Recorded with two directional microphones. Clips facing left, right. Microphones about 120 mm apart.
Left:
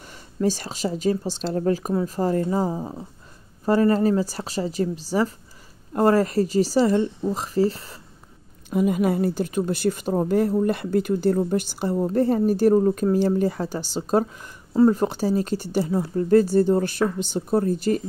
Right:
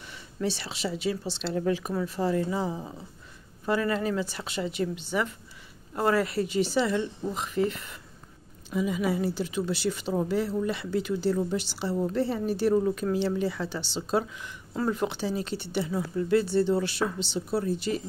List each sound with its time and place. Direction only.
0.0 s speech: 45° left (ahead or behind)
8.6 s a woman's voice: 55° left (ahead or behind)